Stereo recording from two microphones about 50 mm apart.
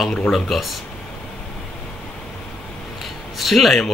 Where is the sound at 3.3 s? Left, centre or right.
Centre.